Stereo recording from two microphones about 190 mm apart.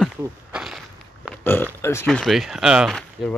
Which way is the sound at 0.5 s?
Centre (ahead or behind).